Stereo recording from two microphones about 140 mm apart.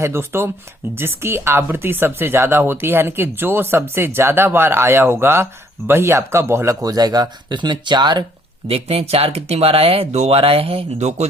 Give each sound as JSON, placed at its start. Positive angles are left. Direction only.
{"t": 0.0, "sound": "speech", "side_deg": -20}
{"t": 8.6, "sound": "speech", "side_deg": -45}